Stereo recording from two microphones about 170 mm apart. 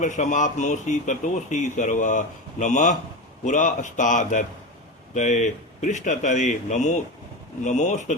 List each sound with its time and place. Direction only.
0.0 s speech: 45° left (ahead or behind)